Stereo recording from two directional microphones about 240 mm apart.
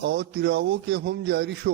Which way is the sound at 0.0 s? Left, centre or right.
Right.